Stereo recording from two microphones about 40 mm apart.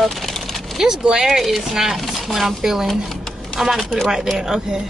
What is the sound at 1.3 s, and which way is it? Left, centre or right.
Speech, centre.